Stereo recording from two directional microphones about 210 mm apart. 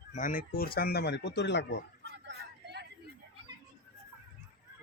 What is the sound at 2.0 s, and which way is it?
Vehicle, 55° right (ahead or behind).